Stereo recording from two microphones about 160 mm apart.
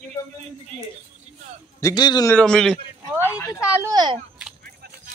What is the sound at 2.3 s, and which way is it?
Speech, 5° left (ahead or behind).